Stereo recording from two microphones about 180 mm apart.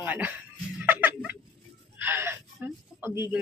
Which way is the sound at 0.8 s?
10° right (ahead or behind).